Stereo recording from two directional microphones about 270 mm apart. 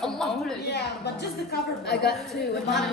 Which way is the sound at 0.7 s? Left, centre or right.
Left.